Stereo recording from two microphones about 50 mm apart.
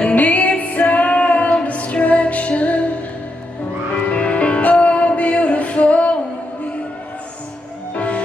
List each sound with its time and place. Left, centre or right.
0.0 s music: left
4.1 s music: left
7.9 s music: left